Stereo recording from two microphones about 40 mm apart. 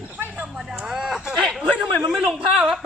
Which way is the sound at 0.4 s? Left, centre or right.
Centre.